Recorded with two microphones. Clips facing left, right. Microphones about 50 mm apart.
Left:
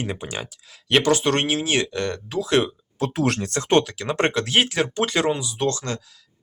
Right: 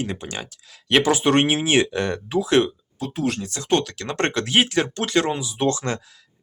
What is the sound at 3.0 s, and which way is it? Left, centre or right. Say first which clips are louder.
Speech: left 3 dB; left.